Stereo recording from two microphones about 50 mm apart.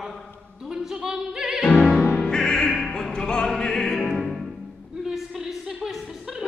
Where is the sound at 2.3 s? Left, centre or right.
Centre.